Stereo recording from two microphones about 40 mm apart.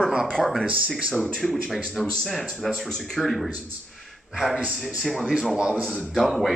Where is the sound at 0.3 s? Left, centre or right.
Centre.